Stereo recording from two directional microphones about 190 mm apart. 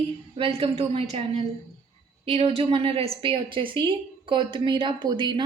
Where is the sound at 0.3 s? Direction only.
30° right (ahead or behind).